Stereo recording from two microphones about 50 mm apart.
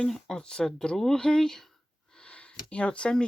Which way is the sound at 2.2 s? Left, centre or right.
Left.